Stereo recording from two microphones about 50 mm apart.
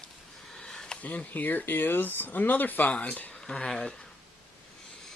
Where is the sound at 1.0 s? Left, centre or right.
Left.